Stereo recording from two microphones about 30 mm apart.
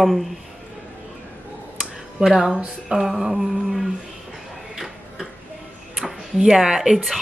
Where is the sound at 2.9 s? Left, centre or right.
Right.